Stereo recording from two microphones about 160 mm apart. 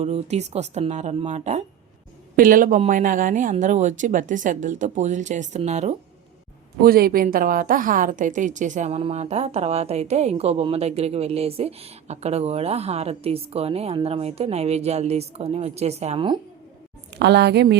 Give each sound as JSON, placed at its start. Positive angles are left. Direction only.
{"t": 0.0, "sound": "speech", "side_deg": -45}
{"t": 2.3, "sound": "speech", "side_deg": -60}
{"t": 6.8, "sound": "a woman's voice", "side_deg": -70}
{"t": 17.2, "sound": "a woman's voice", "side_deg": -90}